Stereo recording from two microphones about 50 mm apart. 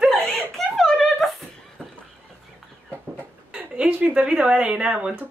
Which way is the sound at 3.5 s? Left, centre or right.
Right.